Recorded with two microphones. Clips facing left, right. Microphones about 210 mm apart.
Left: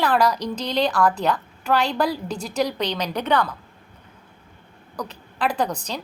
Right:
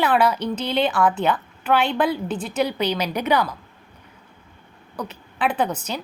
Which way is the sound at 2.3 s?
40° left (ahead or behind).